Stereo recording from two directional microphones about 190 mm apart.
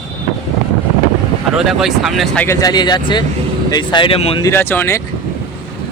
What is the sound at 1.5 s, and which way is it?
Speech, centre (ahead or behind).